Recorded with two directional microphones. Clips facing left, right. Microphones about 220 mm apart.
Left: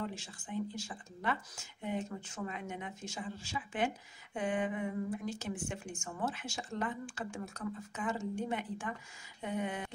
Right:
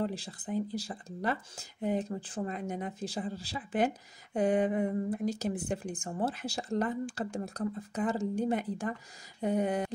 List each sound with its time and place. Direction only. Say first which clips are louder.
0.0 s speech: right 7 dB; 35° right (ahead or behind)